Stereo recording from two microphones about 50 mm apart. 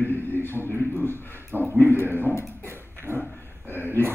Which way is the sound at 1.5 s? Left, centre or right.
Right.